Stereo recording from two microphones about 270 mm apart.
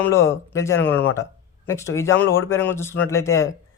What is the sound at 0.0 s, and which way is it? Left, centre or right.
Speech, centre.